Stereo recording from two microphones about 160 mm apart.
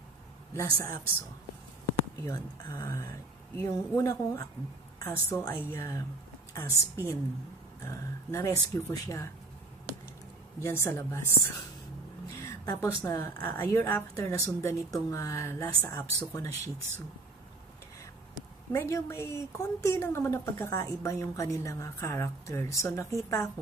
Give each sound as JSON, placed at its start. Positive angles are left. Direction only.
{"t": 0.6, "sound": "speech", "side_deg": 20}
{"t": 2.2, "sound": "speech", "side_deg": 15}
{"t": 10.6, "sound": "speech", "side_deg": 15}
{"t": 18.7, "sound": "speech", "side_deg": 15}